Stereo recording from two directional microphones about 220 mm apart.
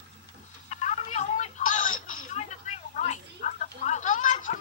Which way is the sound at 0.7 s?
30° left (ahead or behind).